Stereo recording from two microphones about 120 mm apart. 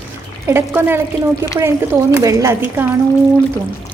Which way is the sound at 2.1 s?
25° right (ahead or behind).